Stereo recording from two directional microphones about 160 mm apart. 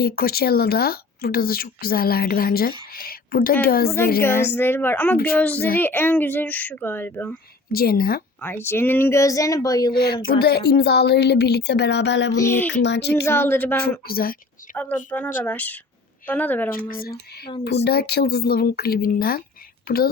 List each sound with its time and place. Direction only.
0.0 s a woman's voice: 70° left (ahead or behind)
3.8 s speech: 15° left (ahead or behind)
7.7 s speech: 65° left (ahead or behind)
8.4 s speech: 10° left (ahead or behind)
9.9 s speech: 90° left
12.3 s speech: 15° left (ahead or behind)
12.8 s speech: 90° left
13.2 s speech: 15° left (ahead or behind)
14.1 s speech: 70° left (ahead or behind)
14.8 s speech: 10° left (ahead or behind)
17.6 s speech: 90° left; by 20.0 s 70° left (ahead or behind)